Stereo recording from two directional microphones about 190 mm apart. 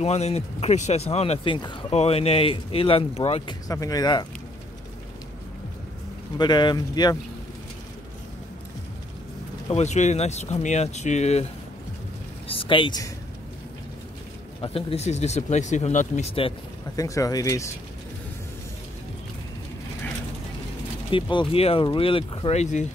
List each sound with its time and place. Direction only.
0.0 s speech: 35° left (ahead or behind)
3.6 s speech: 20° left (ahead or behind)
6.3 s speech: 25° left (ahead or behind)
9.7 s speech: 35° left (ahead or behind)
12.4 s speech: 25° left (ahead or behind)
14.6 s speech: 30° left (ahead or behind)
17.0 s speech: 15° left (ahead or behind)
21.1 s speech: 25° left (ahead or behind)